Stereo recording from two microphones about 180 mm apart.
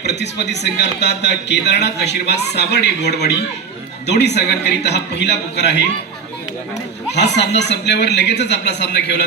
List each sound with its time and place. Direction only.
0.0 s a man's voice: 70° left (ahead or behind)
7.1 s a man's voice: 70° left (ahead or behind)